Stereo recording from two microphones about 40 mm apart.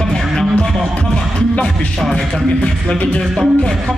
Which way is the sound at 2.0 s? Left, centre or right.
Centre.